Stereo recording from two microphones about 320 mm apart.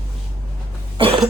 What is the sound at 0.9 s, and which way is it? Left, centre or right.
Cough, centre.